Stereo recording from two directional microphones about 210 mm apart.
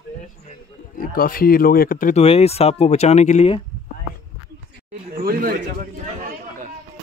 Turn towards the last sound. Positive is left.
turn(degrees=-45)  # may be behind; listen again after turning